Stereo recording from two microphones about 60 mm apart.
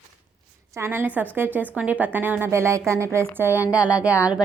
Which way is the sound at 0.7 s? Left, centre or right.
Right.